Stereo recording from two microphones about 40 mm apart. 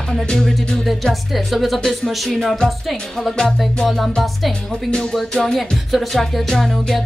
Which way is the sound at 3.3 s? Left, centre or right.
Centre.